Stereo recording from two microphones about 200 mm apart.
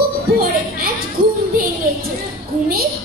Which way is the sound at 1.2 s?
45° right (ahead or behind).